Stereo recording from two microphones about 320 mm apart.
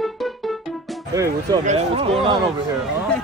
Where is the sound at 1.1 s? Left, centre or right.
Centre.